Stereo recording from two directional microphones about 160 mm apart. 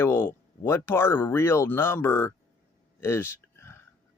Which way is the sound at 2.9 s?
15° left (ahead or behind).